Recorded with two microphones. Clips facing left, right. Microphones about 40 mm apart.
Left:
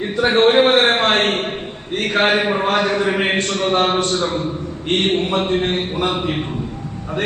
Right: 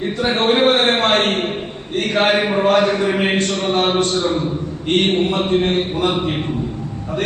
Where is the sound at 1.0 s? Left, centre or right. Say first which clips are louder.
Even; left.